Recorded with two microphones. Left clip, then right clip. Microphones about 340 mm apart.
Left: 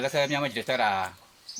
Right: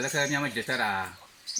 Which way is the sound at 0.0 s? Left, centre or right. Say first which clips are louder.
Left 2 dB; centre.